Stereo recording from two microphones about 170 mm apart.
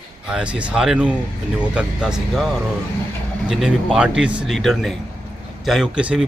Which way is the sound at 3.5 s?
Centre (ahead or behind).